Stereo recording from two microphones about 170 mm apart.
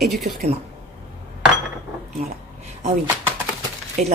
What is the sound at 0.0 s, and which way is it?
Speech, centre (ahead or behind).